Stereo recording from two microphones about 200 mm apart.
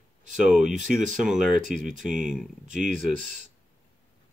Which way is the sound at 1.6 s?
40° right (ahead or behind).